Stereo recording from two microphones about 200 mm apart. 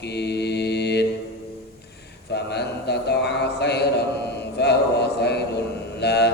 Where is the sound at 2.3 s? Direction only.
55° left (ahead or behind).